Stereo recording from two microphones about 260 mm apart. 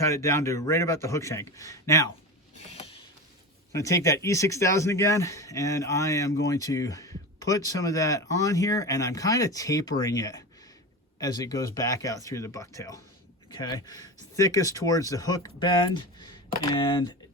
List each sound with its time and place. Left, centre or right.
0.0 s speech: centre
2.6 s a sound: left
3.7 s speech: centre